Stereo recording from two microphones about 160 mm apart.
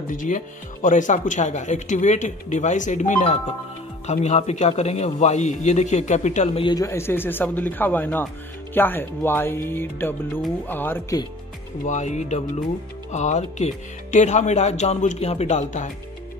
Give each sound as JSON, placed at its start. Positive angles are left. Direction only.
{"t": 0.1, "sound": "speech", "side_deg": 55}
{"t": 6.7, "sound": "speech", "side_deg": 20}
{"t": 11.8, "sound": "speech", "side_deg": 50}